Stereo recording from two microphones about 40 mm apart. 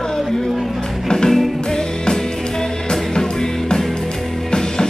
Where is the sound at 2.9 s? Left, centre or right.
Centre.